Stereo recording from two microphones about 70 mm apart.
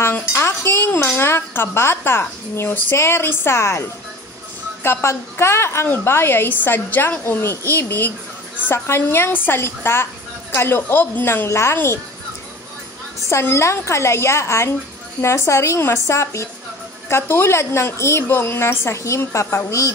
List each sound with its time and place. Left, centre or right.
0.2 s speech: left
4.8 s speech: left
13.3 s speech: left